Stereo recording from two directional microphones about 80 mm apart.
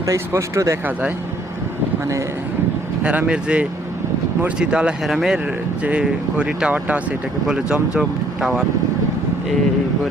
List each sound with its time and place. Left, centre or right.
0.0 s speech: right
3.0 s speech: centre
5.8 s speech: centre